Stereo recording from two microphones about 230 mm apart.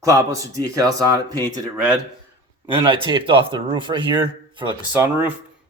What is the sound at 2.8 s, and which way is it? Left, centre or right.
Speech, right.